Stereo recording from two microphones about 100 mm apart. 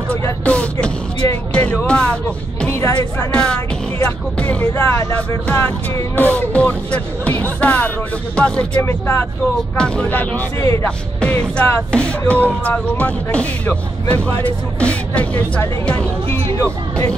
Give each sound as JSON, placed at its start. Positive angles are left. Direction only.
{"t": 0.5, "sound": "a sound", "side_deg": 10}
{"t": 1.5, "sound": "music", "side_deg": 10}
{"t": 2.7, "sound": "speech", "side_deg": 25}
{"t": 3.3, "sound": "music", "side_deg": 10}
{"t": 4.7, "sound": "speech", "side_deg": 25}
{"t": 8.8, "sound": "speech", "side_deg": 25}
{"t": 9.8, "sound": "speech", "side_deg": 10}
{"t": 10.6, "sound": "speech", "side_deg": 30}
{"t": 11.1, "sound": "music", "side_deg": 10}
{"t": 11.9, "sound": "speech", "side_deg": 10}